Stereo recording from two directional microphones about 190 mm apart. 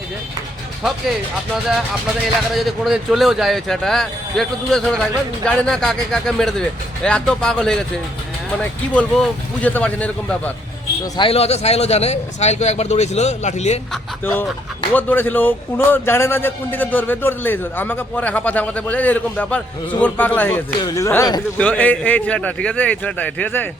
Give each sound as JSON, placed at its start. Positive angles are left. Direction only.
{"t": 0.8, "sound": "a man's voice", "side_deg": 0}
{"t": 2.2, "sound": "a man's voice", "side_deg": 0}
{"t": 11.0, "sound": "speech", "side_deg": 25}
{"t": 13.9, "sound": "a man's voice", "side_deg": 10}